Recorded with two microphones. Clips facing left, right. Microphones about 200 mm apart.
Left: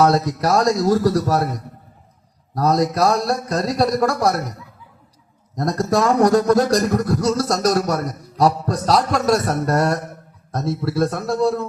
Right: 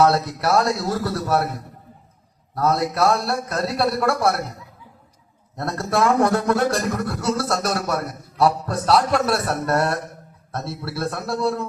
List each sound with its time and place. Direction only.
0.0 s a man's voice: 40° left (ahead or behind)
2.6 s a man's voice: 40° left (ahead or behind)
5.5 s a man's voice: 40° left (ahead or behind)